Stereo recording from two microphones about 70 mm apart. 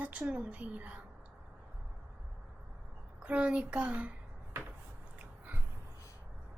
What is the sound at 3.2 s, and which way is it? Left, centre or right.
Speech, centre.